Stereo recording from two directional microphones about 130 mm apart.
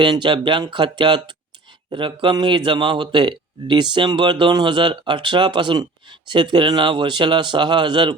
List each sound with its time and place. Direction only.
0.0 s a man's voice: 35° right (ahead or behind)